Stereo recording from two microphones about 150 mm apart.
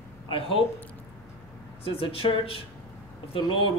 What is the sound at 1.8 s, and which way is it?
Speech, 40° left (ahead or behind).